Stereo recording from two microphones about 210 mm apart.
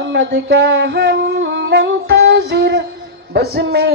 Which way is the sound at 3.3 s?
50° right (ahead or behind).